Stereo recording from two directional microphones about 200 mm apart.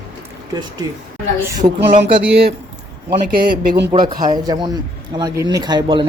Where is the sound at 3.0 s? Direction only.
50° right (ahead or behind).